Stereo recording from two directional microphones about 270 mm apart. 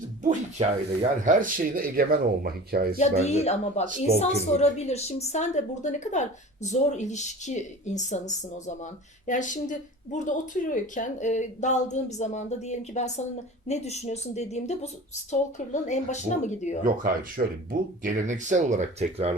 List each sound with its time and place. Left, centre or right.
0.2 s speech: right
3.0 s a woman's voice: left
3.8 s speech: right
4.2 s a woman's voice: left
16.8 s speech: right